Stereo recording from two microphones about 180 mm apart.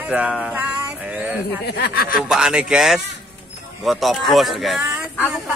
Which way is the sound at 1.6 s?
60° left (ahead or behind).